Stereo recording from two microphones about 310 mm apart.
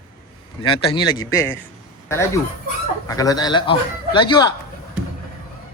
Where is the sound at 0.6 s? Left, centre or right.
Centre.